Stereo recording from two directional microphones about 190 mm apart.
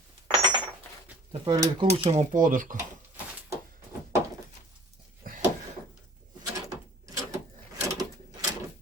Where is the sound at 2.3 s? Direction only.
45° right (ahead or behind).